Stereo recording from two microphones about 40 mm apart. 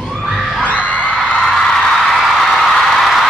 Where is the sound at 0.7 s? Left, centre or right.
Left.